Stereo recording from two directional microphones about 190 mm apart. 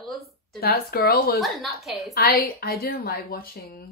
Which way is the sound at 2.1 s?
50° left (ahead or behind).